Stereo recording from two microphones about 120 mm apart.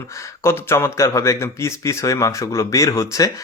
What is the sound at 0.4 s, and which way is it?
Speech, 20° left (ahead or behind).